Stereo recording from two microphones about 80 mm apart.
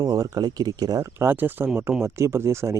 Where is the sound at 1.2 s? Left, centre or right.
Right.